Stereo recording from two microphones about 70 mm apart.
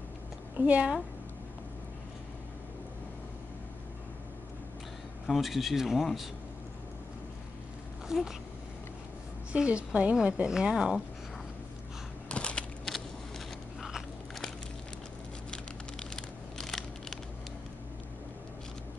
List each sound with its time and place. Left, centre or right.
0.6 s speech: right
5.2 s speech: centre
8.1 s speech: centre
9.5 s a woman's voice: centre
12.3 s a sound: centre
13.7 s biting: centre
15.5 s a sound: centre